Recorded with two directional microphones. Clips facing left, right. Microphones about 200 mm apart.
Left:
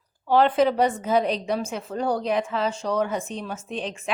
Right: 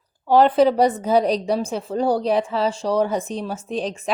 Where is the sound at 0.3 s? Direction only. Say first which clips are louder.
Right 4 dB; 40° right (ahead or behind).